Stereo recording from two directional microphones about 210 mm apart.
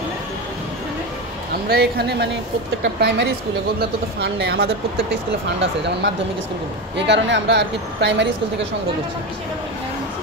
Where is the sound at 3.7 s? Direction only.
50° right (ahead or behind).